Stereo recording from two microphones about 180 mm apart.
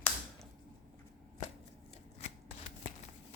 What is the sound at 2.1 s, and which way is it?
Shuffling cards, 35° left (ahead or behind).